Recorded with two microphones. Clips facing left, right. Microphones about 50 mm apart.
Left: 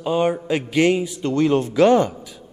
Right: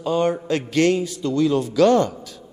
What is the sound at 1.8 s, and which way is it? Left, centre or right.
Music, centre.